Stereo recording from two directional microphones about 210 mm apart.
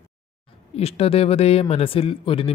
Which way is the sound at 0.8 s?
30° left (ahead or behind).